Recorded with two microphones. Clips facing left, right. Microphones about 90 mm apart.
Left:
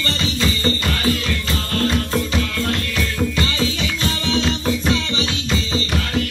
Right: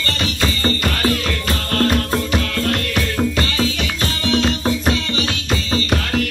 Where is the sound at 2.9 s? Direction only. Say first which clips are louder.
Right 2 dB; 35° right (ahead or behind).